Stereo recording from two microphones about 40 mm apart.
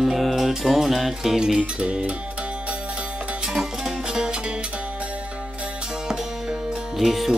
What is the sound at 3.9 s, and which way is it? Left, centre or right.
Music, centre.